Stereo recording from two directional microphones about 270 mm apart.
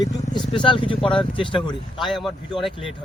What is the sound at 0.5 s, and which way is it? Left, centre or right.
Speech, centre.